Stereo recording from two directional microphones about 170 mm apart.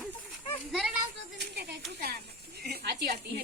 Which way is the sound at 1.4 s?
75° right (ahead or behind).